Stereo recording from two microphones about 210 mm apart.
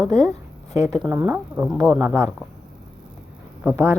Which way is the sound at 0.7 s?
15° right (ahead or behind).